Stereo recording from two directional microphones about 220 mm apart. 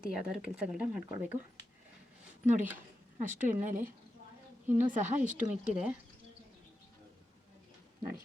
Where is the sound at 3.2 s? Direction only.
35° right (ahead or behind).